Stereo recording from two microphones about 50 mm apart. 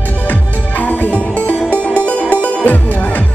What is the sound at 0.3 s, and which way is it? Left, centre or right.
Music, left.